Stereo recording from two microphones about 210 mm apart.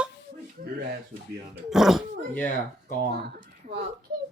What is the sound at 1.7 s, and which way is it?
Speech, centre (ahead or behind).